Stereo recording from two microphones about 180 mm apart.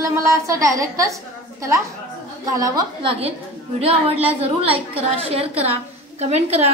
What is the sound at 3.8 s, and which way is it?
A woman's voice, 35° right (ahead or behind).